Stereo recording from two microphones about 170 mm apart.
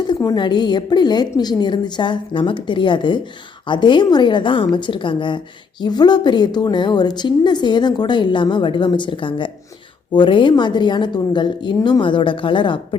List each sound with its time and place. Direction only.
0.1 s a woman's voice: 25° left (ahead or behind)